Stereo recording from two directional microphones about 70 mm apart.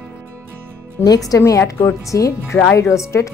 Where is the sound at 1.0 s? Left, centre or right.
Left.